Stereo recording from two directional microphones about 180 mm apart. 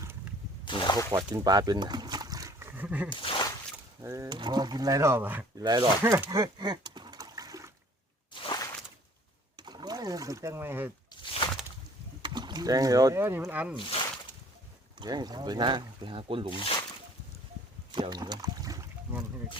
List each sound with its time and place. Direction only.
0.6 s speech: 25° left (ahead or behind)
1.1 s speech: 20° right (ahead or behind)
3.1 s a sound: 25° left (ahead or behind)
4.0 s speech: 15° right (ahead or behind)
5.5 s speech: 20° right (ahead or behind)
6.4 s splash: 25° right (ahead or behind)
8.3 s a sound: 25° left (ahead or behind)
9.6 s rowboat: 25° right (ahead or behind)
11.2 s a sound: 30° left (ahead or behind)
12.2 s speech: 25° right (ahead or behind); by 13.7 s 10° right (ahead or behind)
13.7 s speech: 25° left (ahead or behind)
14.9 s speech: 20° right (ahead or behind)
16.6 s speech: 30° left (ahead or behind)
17.9 s a sound: 25° right (ahead or behind)